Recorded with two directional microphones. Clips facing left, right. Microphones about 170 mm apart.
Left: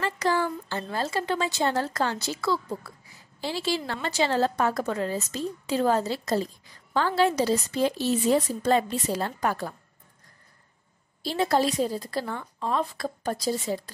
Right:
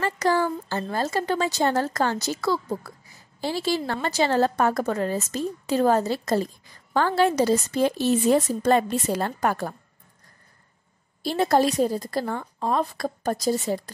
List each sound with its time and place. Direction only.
0.0 s a woman's voice: 45° right (ahead or behind)
11.2 s a woman's voice: 45° right (ahead or behind)